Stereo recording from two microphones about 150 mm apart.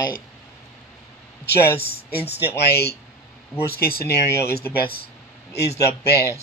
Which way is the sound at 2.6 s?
90° left.